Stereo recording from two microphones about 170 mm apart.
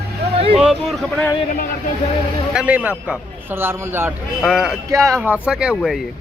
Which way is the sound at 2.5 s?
10° right (ahead or behind).